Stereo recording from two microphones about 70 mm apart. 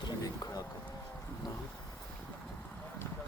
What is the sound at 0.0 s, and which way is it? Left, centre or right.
Vehicle, left.